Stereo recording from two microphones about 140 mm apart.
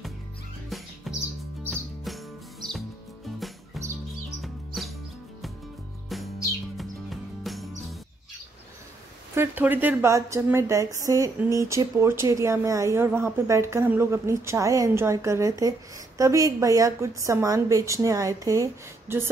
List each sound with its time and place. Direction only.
0.7 s music: centre (ahead or behind)
6.8 s music: centre (ahead or behind)
9.3 s a woman's voice: 15° right (ahead or behind)